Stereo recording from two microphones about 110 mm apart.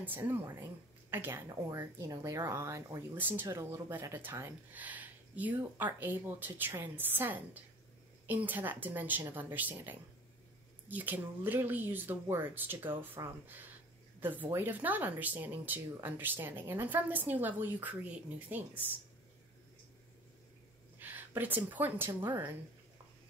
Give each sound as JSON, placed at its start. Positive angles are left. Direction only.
{"t": 0.0, "sound": "speech", "side_deg": -15}
{"t": 3.4, "sound": "speech", "side_deg": -30}
{"t": 21.0, "sound": "a woman's voice", "side_deg": -15}